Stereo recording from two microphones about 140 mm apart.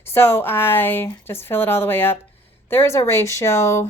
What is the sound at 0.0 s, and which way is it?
A woman's voice, 15° left (ahead or behind).